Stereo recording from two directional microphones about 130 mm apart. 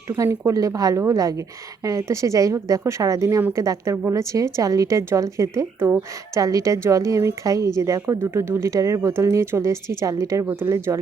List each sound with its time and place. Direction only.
0.2 s a woman's voice: 25° right (ahead or behind)